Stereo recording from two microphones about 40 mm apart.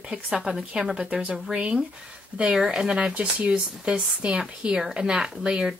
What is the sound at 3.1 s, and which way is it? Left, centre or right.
Speech, right.